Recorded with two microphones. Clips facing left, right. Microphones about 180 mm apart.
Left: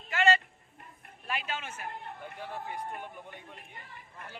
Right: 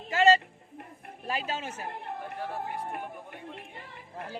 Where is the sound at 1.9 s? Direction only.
70° right (ahead or behind).